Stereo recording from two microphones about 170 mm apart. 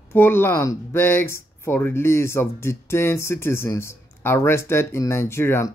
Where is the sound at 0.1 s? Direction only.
15° left (ahead or behind).